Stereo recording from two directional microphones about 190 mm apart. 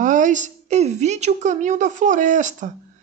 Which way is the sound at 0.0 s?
40° right (ahead or behind).